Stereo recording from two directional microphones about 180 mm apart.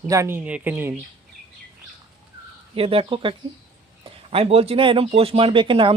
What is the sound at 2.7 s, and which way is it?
Speech, 30° right (ahead or behind).